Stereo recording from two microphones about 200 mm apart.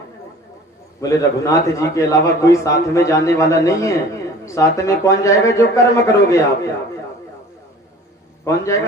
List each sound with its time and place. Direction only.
1.0 s a man's voice: 15° left (ahead or behind)
8.4 s a man's voice: 15° left (ahead or behind)